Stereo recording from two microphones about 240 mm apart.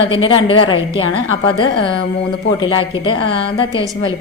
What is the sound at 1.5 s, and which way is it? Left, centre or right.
Speech, centre.